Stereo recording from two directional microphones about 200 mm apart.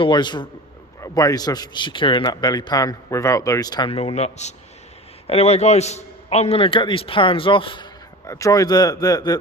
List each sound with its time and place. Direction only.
0.0 s a man's voice: 20° left (ahead or behind)